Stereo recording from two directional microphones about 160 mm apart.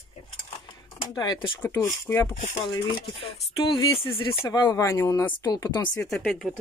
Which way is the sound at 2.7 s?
30° left (ahead or behind).